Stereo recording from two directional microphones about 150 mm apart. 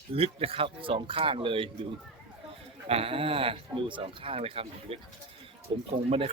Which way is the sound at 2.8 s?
40° right (ahead or behind).